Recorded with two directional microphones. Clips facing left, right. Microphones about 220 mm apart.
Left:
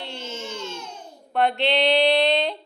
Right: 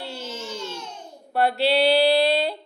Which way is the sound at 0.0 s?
5° right (ahead or behind).